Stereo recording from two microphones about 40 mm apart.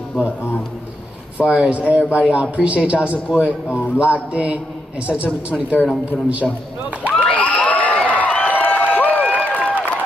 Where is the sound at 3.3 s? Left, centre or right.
Right.